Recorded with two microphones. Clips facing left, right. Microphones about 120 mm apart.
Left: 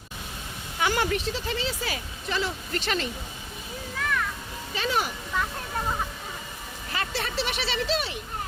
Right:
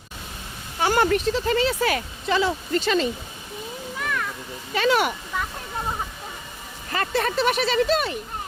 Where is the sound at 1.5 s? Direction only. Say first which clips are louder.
Right 9 dB; 60° right (ahead or behind).